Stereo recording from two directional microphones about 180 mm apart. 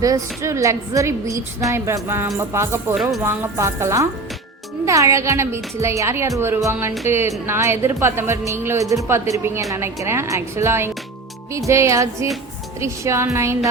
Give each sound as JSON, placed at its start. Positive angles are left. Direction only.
{"t": 0.0, "sound": "a woman's voice", "side_deg": -15}
{"t": 2.9, "sound": "speech", "side_deg": 0}
{"t": 3.2, "sound": "a woman's voice", "side_deg": -15}